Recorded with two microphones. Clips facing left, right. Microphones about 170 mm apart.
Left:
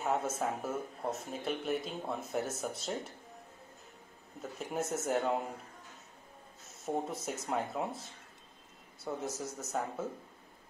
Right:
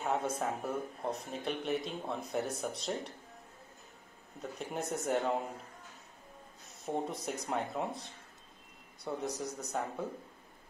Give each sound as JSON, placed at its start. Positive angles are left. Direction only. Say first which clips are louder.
{"t": 0.0, "sound": "speech", "louder": "left 1 dB", "side_deg": 0}
{"t": 4.4, "sound": "speech", "louder": "left 2 dB", "side_deg": 0}
{"t": 6.8, "sound": "speech", "louder": "even", "side_deg": 0}